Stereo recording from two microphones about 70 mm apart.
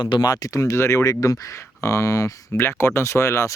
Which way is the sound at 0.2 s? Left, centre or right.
Left.